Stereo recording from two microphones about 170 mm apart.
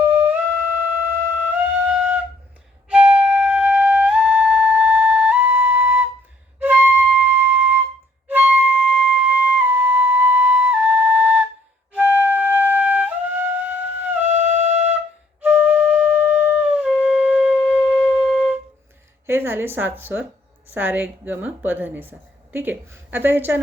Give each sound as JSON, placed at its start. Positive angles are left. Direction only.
{"t": 0.0, "sound": "music", "side_deg": -10}
{"t": 1.5, "sound": "music", "side_deg": -10}
{"t": 2.9, "sound": "flute", "side_deg": -5}
{"t": 14.3, "sound": "music", "side_deg": -45}
{"t": 15.4, "sound": "flute", "side_deg": -10}
{"t": 19.2, "sound": "a woman's voice", "side_deg": -15}